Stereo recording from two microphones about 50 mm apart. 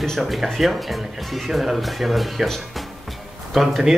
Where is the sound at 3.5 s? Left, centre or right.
Centre.